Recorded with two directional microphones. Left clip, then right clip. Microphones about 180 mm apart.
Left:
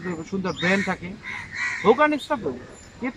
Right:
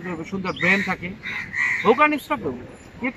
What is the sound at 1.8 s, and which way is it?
Speech, centre (ahead or behind).